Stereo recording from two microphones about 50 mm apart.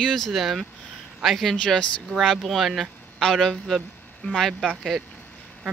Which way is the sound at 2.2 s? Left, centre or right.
Centre.